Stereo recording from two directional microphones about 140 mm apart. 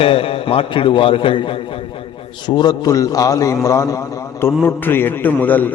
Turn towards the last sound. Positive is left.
turn(degrees=10)  # may be behind; listen again after turning